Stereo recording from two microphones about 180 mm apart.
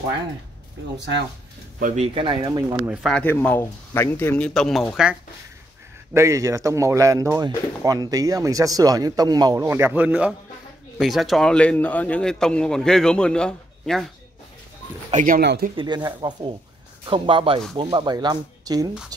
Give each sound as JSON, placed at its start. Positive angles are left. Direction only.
{"t": 0.9, "sound": "speech", "side_deg": -75}
{"t": 1.8, "sound": "speech", "side_deg": -45}
{"t": 2.1, "sound": "speech", "side_deg": -25}
{"t": 2.9, "sound": "speech", "side_deg": 0}
{"t": 6.1, "sound": "a man's voice", "side_deg": -15}
{"t": 15.0, "sound": "speech", "side_deg": -45}
{"t": 15.7, "sound": "speech", "side_deg": -25}